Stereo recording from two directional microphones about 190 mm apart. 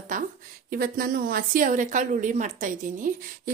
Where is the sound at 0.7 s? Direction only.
50° right (ahead or behind).